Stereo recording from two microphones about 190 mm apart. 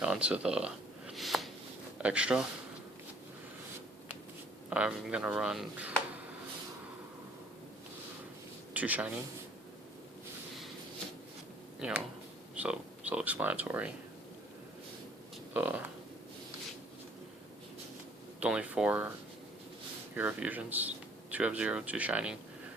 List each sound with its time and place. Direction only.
0.0 s a sound: 5° right (ahead or behind)
2.0 s speech: 5° right (ahead or behind)
4.7 s speech: 5° right (ahead or behind)
8.7 s speech: 10° right (ahead or behind)
11.8 s speech: 5° right (ahead or behind)
15.5 s speech: 10° right (ahead or behind)
18.3 s speech: 5° right (ahead or behind)
20.1 s speech: 10° right (ahead or behind)